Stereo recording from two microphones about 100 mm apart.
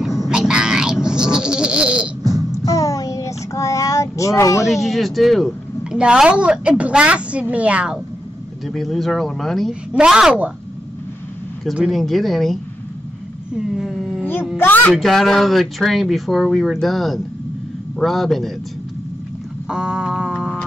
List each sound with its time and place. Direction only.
0.3 s a sound: 5° right (ahead or behind)
2.5 s child singing: 35° left (ahead or behind)
4.6 s a woman's voice: centre (ahead or behind)
8.6 s a woman's voice: centre (ahead or behind)
11.6 s speech: 5° right (ahead or behind)
19.7 s a sound: 10° right (ahead or behind)